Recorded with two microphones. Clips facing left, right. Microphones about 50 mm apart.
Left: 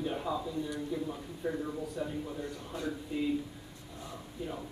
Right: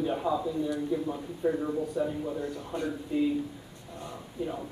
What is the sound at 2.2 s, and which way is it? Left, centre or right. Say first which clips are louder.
Speech: right 6 dB; right.